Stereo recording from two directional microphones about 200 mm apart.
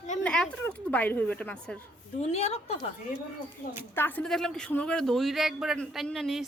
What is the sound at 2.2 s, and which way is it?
Speech, 35° left (ahead or behind).